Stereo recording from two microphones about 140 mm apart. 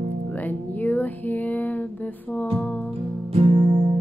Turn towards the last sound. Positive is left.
turn(degrees=-40)  # may be behind; listen again after turning